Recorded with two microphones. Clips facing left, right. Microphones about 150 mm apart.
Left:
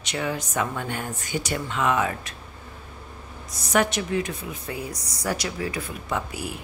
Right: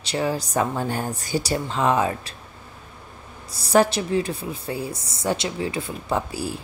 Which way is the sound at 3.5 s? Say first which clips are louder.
Right 5 dB; 30° right (ahead or behind).